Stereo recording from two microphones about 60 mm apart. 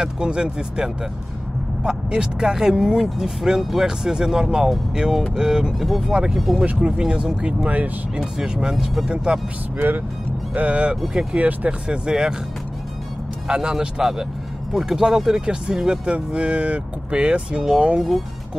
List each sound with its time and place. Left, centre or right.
0.0 s speech: centre
6.6 s speech: right
7.0 s speech: centre
8.2 s speech: centre
9.8 s speech: right
12.1 s speech: centre
13.5 s speech: centre